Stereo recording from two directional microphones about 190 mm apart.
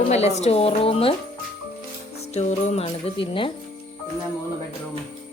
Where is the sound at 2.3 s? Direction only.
35° left (ahead or behind).